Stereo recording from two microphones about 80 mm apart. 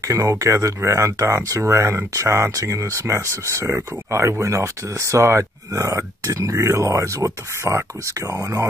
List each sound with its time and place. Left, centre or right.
0.1 s speech: right
6.5 s speech: right